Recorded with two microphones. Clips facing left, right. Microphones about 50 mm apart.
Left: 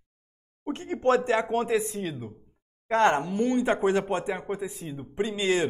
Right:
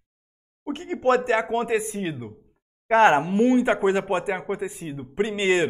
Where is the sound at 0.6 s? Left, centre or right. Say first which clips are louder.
Right 2 dB; centre.